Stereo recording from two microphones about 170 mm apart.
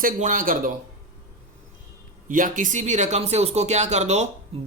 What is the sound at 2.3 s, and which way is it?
Speech, 50° right (ahead or behind).